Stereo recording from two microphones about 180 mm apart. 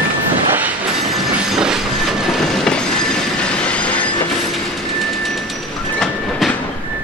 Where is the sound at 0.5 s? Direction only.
5° right (ahead or behind).